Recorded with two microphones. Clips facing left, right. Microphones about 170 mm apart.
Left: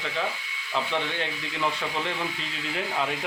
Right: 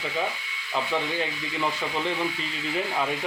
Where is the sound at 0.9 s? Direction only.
5° right (ahead or behind).